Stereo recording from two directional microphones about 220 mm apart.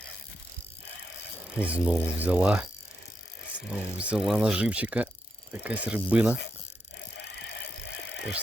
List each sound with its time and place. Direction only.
1.6 s speech: 5° right (ahead or behind)
3.7 s speech: 5° right (ahead or behind)
7.2 s vehicle: 50° left (ahead or behind)